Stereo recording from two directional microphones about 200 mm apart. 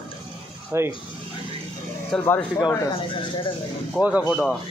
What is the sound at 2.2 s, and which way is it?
Speech, 10° left (ahead or behind).